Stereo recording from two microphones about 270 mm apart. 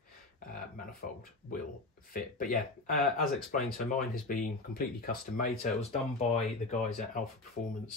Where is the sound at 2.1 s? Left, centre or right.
Left.